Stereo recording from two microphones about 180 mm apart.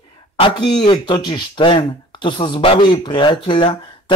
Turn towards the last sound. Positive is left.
turn(degrees=25)  # may be behind; listen again after turning